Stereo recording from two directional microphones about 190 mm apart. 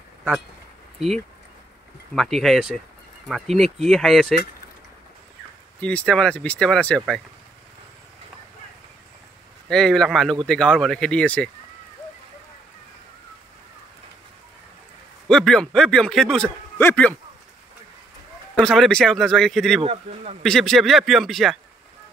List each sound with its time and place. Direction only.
0.9 s a man's voice: centre (ahead or behind)
5.8 s a man's voice: 5° left (ahead or behind)
9.7 s a man's voice: 5° left (ahead or behind)
15.2 s a man's voice: 5° left (ahead or behind)
18.5 s a man's voice: 5° left (ahead or behind)
19.8 s speech: 30° right (ahead or behind)
20.4 s a man's voice: centre (ahead or behind)